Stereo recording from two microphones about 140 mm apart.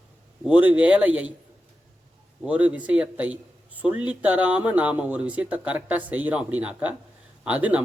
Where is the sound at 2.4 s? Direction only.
10° right (ahead or behind).